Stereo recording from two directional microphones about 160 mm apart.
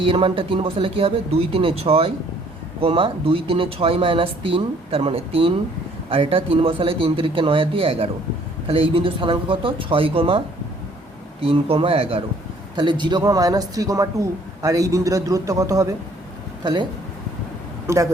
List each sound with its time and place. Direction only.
0.0 s speech: 35° right (ahead or behind)
11.4 s speech: 35° right (ahead or behind)
17.8 s speech: 20° right (ahead or behind)